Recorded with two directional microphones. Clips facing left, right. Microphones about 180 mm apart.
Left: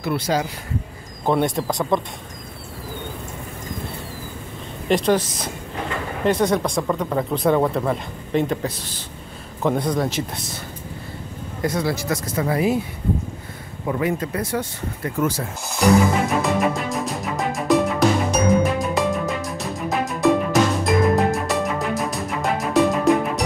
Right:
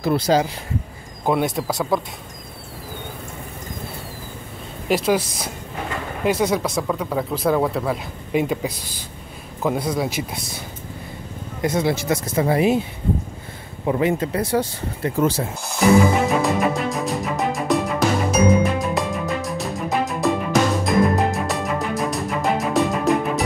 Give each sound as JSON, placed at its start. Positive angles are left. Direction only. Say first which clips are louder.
{"t": 0.0, "sound": "speech", "louder": "right 4 dB", "side_deg": -35}
{"t": 1.2, "sound": "speech", "louder": "left 1 dB", "side_deg": -5}
{"t": 4.8, "sound": "a man's voice", "louder": "left 1 dB", "side_deg": -5}
{"t": 11.6, "sound": "speech", "louder": "right 2 dB", "side_deg": -20}
{"t": 13.8, "sound": "speech", "louder": "right 3 dB", "side_deg": -25}
{"t": 15.8, "sound": "speech", "louder": "right 1 dB", "side_deg": 0}
{"t": 16.3, "sound": "music", "louder": "right 1 dB", "side_deg": 0}